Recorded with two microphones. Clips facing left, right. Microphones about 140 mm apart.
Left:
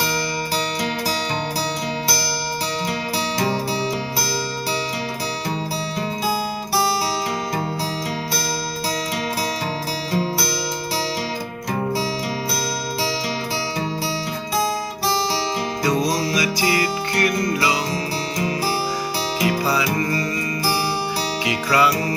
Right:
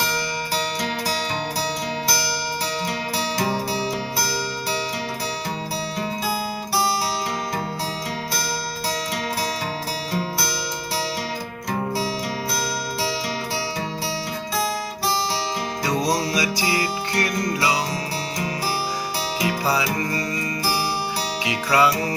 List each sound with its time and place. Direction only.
3.3 s music: centre (ahead or behind)
10.1 s music: centre (ahead or behind)
16.3 s music: 30° right (ahead or behind)
21.4 s music: 25° right (ahead or behind)